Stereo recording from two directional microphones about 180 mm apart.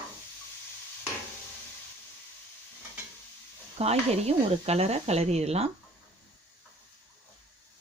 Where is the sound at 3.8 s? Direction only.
35° right (ahead or behind).